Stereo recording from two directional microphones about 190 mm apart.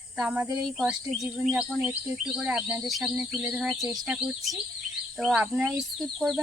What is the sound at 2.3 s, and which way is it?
Speech, 5° right (ahead or behind).